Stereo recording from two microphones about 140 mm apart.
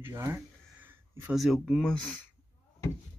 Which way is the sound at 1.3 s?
Centre (ahead or behind).